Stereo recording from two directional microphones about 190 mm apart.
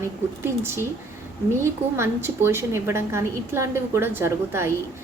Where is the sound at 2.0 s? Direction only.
15° right (ahead or behind).